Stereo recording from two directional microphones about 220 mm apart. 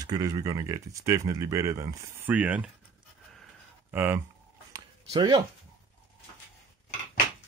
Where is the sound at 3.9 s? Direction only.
10° right (ahead or behind).